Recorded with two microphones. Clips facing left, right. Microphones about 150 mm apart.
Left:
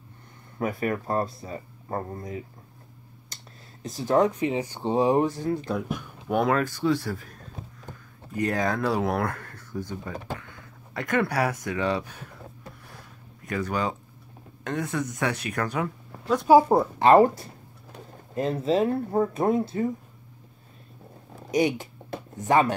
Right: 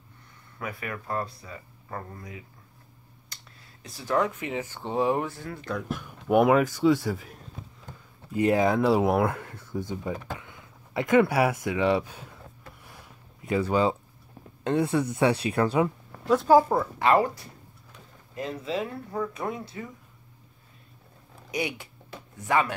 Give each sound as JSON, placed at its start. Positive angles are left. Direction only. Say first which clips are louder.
{"t": 0.6, "sound": "speech", "louder": "left 8 dB", "side_deg": 40}
{"t": 3.8, "sound": "speech", "louder": "left 10 dB", "side_deg": 45}
{"t": 4.4, "sound": "speech", "louder": "left 6 dB", "side_deg": 20}
{"t": 5.3, "sound": "speech", "louder": "left 6 dB", "side_deg": 20}
{"t": 5.9, "sound": "speech", "louder": "right 3 dB", "side_deg": -5}
{"t": 13.7, "sound": "speech", "louder": "right 4 dB", "side_deg": -25}
{"t": 16.3, "sound": "speech", "louder": "left 1 dB", "side_deg": 0}
{"t": 16.5, "sound": "speech", "louder": "left 5 dB", "side_deg": 30}
{"t": 19.6, "sound": "speech", "louder": "left 11 dB", "side_deg": 30}
{"t": 21.5, "sound": "speech", "louder": "left 8 dB", "side_deg": 45}
{"t": 22.1, "sound": "music", "louder": "left 4 dB", "side_deg": 45}